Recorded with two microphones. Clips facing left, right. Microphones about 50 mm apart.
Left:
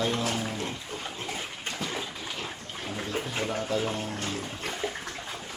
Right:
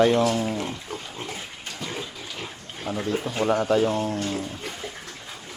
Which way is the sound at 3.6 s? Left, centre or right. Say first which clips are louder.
Right 8 dB; right.